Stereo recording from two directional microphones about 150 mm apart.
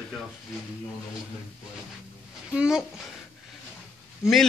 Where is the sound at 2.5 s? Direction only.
5° right (ahead or behind).